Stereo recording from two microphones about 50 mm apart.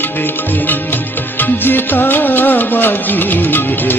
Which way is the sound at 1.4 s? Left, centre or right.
Left.